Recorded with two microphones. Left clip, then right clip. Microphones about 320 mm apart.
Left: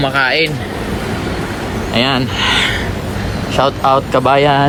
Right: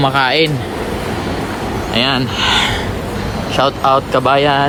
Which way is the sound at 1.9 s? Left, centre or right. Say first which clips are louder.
Left 1 dB; centre.